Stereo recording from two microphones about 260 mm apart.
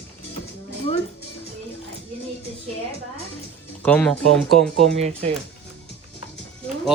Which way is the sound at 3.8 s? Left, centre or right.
Centre.